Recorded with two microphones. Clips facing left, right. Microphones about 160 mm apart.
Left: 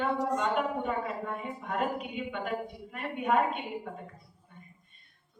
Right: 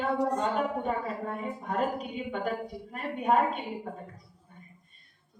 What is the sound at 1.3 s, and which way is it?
A woman's voice, 35° right (ahead or behind).